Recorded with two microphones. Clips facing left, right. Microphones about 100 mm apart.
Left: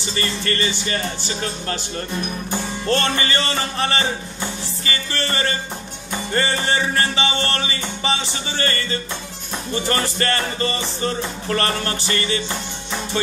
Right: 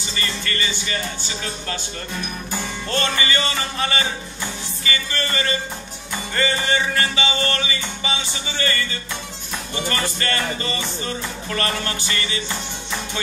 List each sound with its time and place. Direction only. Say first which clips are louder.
0.1 s music: left 4 dB; 40° left (ahead or behind)
2.9 s music: left 3 dB; 35° left (ahead or behind)
9.8 s music: left 3 dB; 35° left (ahead or behind)